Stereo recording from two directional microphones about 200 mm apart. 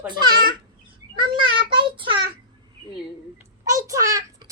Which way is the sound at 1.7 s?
25° right (ahead or behind).